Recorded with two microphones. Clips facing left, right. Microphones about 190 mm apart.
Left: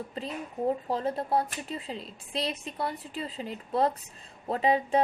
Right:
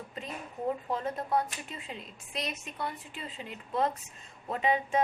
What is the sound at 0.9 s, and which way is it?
A woman's voice, 35° left (ahead or behind).